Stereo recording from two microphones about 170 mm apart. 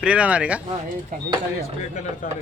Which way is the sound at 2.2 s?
50° left (ahead or behind).